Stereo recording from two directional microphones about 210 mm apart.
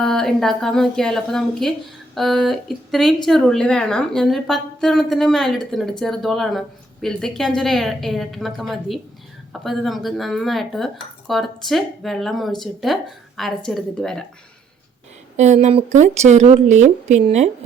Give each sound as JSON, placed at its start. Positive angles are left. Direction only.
{"t": 0.0, "sound": "speech", "side_deg": 0}
{"t": 15.4, "sound": "a woman's voice", "side_deg": -35}